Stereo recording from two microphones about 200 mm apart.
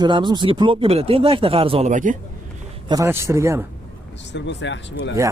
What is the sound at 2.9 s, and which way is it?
Speech, 15° right (ahead or behind).